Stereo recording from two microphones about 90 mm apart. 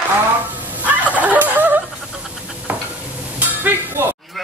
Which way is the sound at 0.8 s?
15° right (ahead or behind).